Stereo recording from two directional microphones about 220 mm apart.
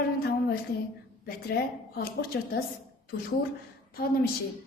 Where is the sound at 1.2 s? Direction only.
45° left (ahead or behind).